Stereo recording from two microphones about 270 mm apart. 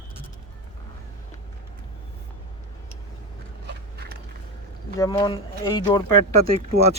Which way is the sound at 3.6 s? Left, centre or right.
Right.